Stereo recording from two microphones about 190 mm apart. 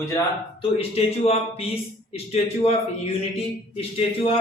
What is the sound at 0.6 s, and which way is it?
A man's voice, 30° left (ahead or behind).